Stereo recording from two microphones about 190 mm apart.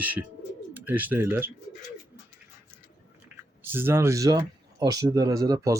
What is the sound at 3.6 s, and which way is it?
Speech, 10° right (ahead or behind).